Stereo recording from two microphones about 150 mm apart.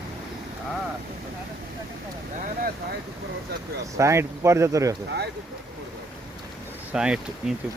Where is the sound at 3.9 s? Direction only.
20° right (ahead or behind).